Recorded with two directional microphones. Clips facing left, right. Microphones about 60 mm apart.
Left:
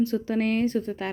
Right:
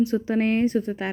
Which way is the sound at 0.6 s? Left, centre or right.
Centre.